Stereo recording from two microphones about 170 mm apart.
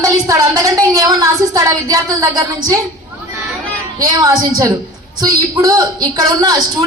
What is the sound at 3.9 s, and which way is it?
A woman's voice, 20° right (ahead or behind).